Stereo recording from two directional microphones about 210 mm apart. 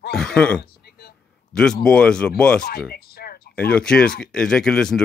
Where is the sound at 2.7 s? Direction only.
45° left (ahead or behind).